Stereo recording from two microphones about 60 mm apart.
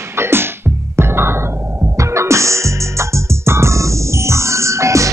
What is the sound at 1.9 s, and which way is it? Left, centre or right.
Music, right.